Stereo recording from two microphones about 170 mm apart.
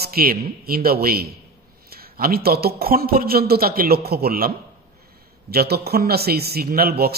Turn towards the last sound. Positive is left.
turn(degrees=-65)  # may be behind; listen again after turning